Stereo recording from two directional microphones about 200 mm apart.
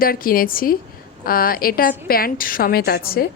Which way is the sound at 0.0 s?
45° left (ahead or behind).